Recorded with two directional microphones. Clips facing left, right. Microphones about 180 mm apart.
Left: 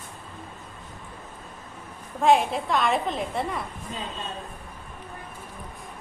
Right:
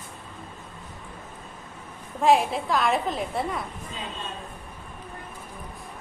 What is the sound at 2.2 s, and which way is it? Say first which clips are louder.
A woman's voice: even; centre (ahead or behind).